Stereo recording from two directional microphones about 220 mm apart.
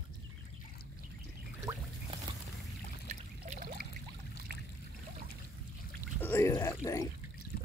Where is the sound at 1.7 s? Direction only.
15° right (ahead or behind).